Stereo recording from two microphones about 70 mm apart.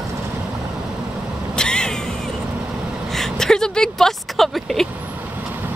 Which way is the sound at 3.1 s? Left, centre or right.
Centre.